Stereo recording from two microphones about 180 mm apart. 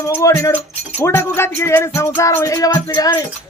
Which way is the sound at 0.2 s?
20° left (ahead or behind).